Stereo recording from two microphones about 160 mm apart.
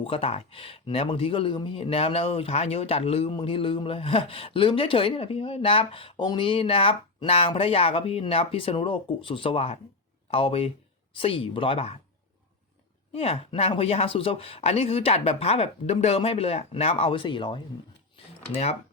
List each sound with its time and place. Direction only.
0.0 s speech: 35° left (ahead or behind)
13.1 s speech: 35° left (ahead or behind)